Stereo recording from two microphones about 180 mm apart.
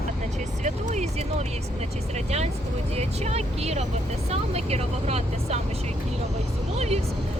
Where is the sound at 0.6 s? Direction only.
40° right (ahead or behind).